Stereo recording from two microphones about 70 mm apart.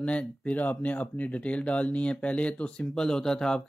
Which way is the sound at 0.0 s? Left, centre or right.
Centre.